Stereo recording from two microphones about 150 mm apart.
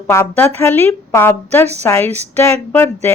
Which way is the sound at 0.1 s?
15° left (ahead or behind).